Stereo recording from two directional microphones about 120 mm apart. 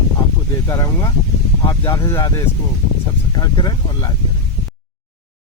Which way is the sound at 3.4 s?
35° left (ahead or behind).